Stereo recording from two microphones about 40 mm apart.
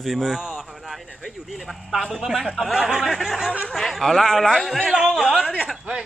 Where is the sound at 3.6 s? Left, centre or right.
Centre.